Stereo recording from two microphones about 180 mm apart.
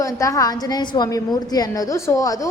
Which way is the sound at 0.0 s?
15° left (ahead or behind).